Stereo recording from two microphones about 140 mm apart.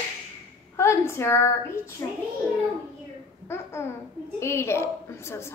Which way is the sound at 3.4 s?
20° left (ahead or behind).